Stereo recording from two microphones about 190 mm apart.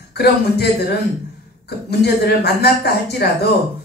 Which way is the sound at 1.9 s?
60° left (ahead or behind).